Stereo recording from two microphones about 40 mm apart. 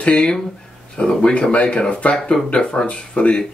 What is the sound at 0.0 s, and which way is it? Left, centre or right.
Speech, left.